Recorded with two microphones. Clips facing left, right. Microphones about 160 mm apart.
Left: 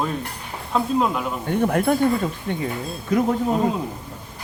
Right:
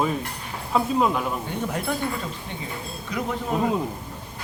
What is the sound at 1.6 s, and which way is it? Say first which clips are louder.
Speech: left 10 dB; 55° left (ahead or behind).